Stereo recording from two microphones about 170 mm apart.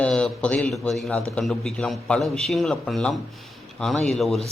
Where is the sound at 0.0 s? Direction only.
5° left (ahead or behind).